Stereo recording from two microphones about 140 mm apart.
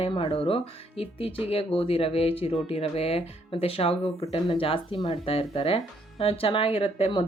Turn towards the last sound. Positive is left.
turn(degrees=45)  # may be behind; listen again after turning